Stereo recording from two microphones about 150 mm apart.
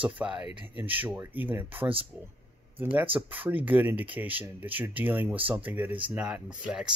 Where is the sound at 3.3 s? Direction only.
10° right (ahead or behind).